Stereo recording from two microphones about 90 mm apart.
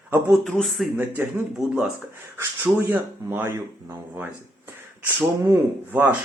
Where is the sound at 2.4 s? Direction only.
25° right (ahead or behind).